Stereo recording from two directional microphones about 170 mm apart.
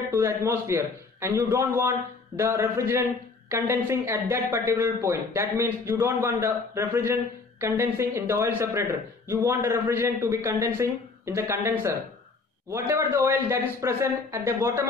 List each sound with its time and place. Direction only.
0.1 s speech: 15° right (ahead or behind)